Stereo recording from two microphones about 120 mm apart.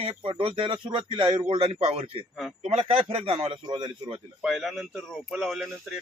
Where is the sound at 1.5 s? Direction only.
55° right (ahead or behind); by 4.2 s 40° right (ahead or behind).